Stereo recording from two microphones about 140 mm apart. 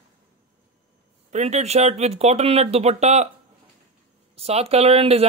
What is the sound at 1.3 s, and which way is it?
Speech, 55° right (ahead or behind).